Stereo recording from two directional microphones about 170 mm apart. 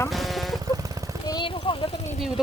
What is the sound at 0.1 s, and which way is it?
Vehicle, centre (ahead or behind).